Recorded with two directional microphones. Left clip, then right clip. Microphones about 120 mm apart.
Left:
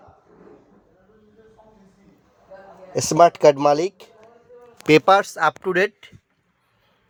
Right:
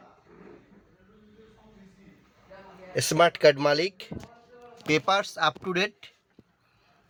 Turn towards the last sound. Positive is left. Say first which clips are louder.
# left 8 dB
turn(degrees=40)  # may be behind; listen again after turning